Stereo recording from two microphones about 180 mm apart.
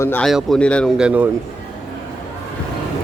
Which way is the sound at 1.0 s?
5° right (ahead or behind).